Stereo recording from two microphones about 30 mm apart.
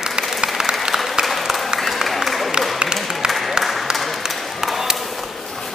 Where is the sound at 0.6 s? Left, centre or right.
Right.